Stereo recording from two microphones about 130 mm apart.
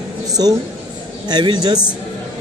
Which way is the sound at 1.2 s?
35° right (ahead or behind).